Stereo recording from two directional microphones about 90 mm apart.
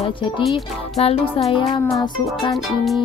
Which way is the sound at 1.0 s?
85° left.